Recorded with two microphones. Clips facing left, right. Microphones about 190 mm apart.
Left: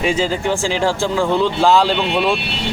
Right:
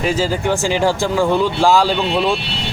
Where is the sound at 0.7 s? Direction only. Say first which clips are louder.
Right 1 dB; 15° right (ahead or behind).